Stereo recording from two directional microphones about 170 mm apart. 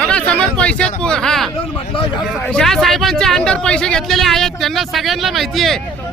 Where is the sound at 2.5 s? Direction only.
5° left (ahead or behind).